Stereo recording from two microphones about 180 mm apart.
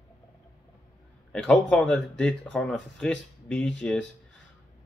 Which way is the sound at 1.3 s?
5° left (ahead or behind).